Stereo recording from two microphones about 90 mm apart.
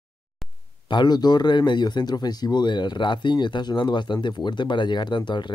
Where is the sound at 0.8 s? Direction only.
55° left (ahead or behind).